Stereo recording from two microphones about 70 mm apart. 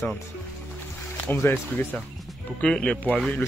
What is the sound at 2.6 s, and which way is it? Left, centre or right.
Speech, centre.